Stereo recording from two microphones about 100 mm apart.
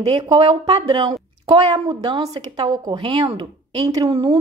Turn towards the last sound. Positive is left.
turn(degrees=-65)  # may be behind; listen again after turning